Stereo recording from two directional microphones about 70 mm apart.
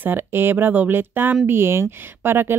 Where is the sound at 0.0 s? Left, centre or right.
Right.